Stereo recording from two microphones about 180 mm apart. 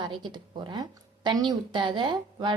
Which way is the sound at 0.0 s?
25° right (ahead or behind).